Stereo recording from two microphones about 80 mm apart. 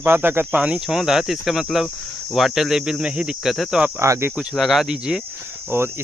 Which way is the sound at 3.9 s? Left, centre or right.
Right.